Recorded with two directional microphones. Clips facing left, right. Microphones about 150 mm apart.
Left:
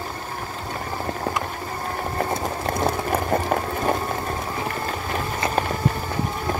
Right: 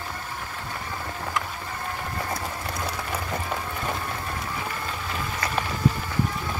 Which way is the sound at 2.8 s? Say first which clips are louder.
Left 10 dB; 50° left (ahead or behind).